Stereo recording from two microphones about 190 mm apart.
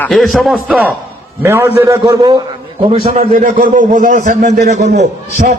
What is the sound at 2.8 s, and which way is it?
Speech, 30° right (ahead or behind).